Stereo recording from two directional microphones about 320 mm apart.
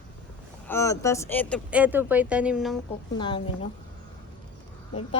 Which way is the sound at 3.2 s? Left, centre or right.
Centre.